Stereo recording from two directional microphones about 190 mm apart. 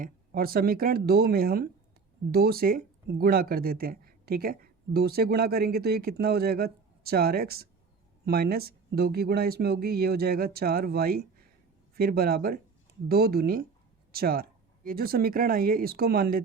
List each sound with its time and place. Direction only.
0.0 s speech: 50° right (ahead or behind)